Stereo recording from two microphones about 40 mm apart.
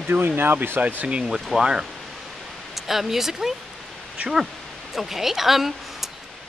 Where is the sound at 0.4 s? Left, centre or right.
Right.